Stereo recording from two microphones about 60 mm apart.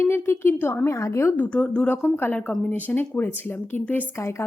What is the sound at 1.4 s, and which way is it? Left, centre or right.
Speech, left.